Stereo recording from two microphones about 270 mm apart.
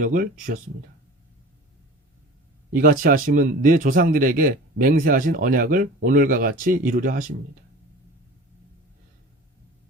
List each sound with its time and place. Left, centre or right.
0.0 s speech: right
2.7 s speech: right